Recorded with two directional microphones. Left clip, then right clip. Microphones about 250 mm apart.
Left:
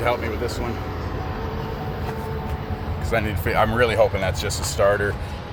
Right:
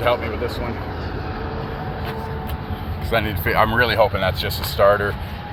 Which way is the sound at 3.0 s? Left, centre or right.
Centre.